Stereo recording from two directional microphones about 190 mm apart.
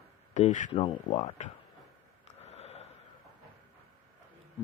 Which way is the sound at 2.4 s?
35° left (ahead or behind).